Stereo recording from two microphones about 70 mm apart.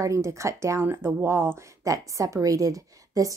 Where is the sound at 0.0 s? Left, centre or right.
Right.